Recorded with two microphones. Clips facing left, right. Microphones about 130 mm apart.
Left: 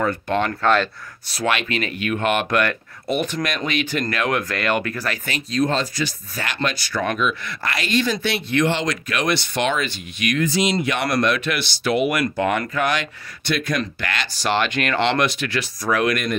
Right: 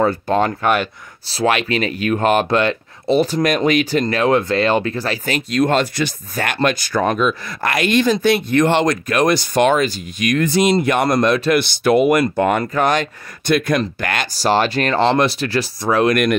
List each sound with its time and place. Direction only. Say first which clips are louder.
0.0 s speech: right 5 dB; 35° right (ahead or behind)
0.5 s speech: right 1 dB; 15° right (ahead or behind)
1.2 s speech: right 5 dB; 30° right (ahead or behind)
2.6 s speech: right 4 dB; 25° right (ahead or behind)
5.5 s speech: right 4 dB; 65° right (ahead or behind); by 10.4 s 40° right (ahead or behind)
10.4 s speech: right 6 dB; 55° right (ahead or behind); by 11.6 s 35° right (ahead or behind)
11.6 s speech: right 6 dB; 50° right (ahead or behind); by 16.2 s 30° right (ahead or behind)